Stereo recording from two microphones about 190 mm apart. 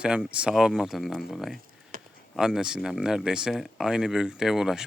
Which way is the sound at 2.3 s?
5° right (ahead or behind).